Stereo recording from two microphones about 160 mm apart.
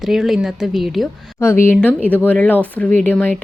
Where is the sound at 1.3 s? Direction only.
15° left (ahead or behind).